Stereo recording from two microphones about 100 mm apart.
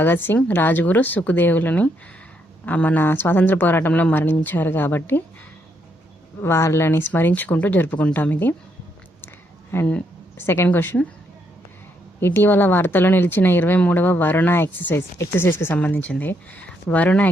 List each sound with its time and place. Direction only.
0.0 s speech: 20° left (ahead or behind)
6.4 s speech: 30° left (ahead or behind)
9.7 s speech: 20° left (ahead or behind)
12.2 s speech: 20° left (ahead or behind)